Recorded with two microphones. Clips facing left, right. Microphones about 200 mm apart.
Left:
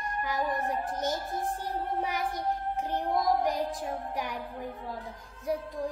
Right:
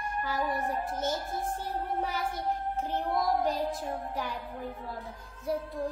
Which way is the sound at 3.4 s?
15° left (ahead or behind).